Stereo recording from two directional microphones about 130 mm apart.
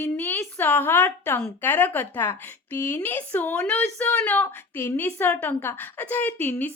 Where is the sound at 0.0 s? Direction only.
15° left (ahead or behind).